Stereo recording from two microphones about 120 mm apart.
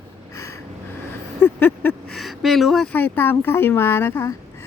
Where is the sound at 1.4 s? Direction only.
15° left (ahead or behind).